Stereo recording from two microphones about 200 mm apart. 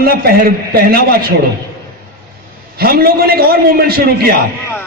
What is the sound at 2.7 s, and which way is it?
A man's voice, 50° right (ahead or behind).